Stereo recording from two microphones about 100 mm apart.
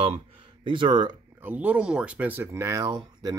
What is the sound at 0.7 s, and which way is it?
Speech, 50° right (ahead or behind).